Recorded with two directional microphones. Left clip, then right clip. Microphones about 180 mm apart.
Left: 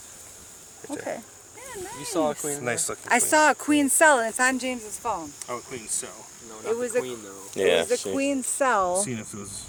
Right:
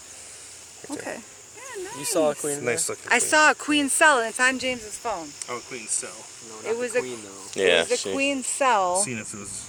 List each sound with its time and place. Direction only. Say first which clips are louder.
0.9 s a sound: left 1 dB; 15° left (ahead or behind)
2.1 s speech: right 3 dB; 60° right (ahead or behind)
2.6 s speech: right 2 dB; 5° right (ahead or behind)
3.1 s speech: right 1 dB; 55° left (ahead or behind)
5.4 s speech: right 1 dB; 15° left (ahead or behind)
6.7 s speech: even; 50° left (ahead or behind)
7.5 s speech: right 1 dB; 10° left (ahead or behind)
8.1 s speech: right 1 dB; 50° left (ahead or behind)
9.0 s speech: right 2 dB; 10° left (ahead or behind)